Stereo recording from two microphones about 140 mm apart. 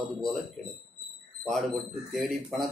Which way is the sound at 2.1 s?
Centre (ahead or behind).